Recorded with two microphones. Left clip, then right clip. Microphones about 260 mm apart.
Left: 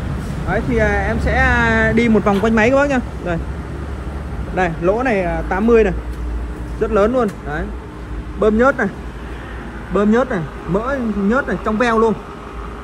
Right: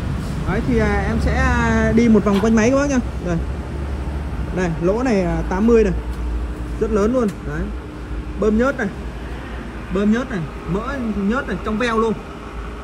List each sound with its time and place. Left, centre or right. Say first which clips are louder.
0.5 s speech: left 3 dB; centre
0.9 s speech: left 4 dB; centre
4.6 s speech: left 3 dB; centre
9.9 s speech: left 6 dB; centre